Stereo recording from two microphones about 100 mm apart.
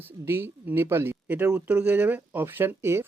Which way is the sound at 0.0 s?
20° right (ahead or behind).